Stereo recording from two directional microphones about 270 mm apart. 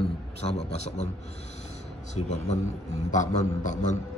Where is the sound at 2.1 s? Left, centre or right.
Left.